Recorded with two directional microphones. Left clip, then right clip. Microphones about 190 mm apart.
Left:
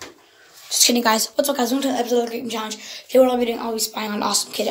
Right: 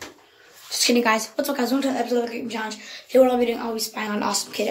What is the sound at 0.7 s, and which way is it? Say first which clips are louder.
A woman's voice: left 2 dB; centre (ahead or behind).